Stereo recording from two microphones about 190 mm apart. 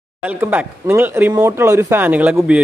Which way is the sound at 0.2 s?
10° right (ahead or behind).